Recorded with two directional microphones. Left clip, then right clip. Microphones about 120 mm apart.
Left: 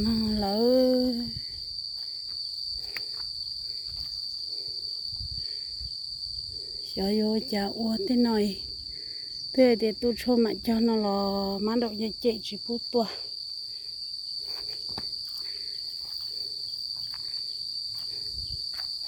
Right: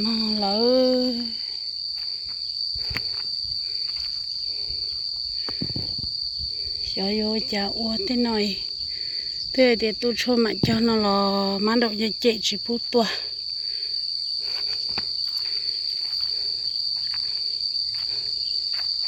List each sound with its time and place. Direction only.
0.0 s a sound: 30° left (ahead or behind)
7.0 s speech: 35° left (ahead or behind)
9.6 s speech: 25° left (ahead or behind); by 12.5 s 5° right (ahead or behind)